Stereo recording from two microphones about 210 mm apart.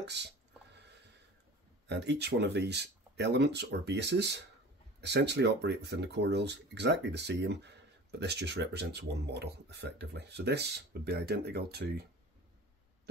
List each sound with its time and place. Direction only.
0.0 s speech: 55° right (ahead or behind)
1.9 s speech: 55° right (ahead or behind)